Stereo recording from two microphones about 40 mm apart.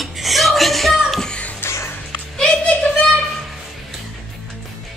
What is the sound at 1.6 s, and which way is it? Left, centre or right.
Music, left.